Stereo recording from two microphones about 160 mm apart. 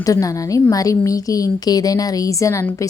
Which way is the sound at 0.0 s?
20° left (ahead or behind).